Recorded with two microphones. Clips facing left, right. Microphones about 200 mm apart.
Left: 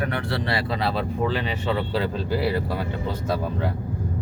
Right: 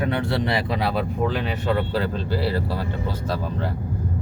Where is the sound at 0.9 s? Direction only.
Centre (ahead or behind).